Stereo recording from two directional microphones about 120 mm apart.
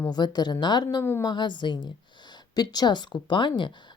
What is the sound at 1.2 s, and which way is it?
Speech, 40° left (ahead or behind).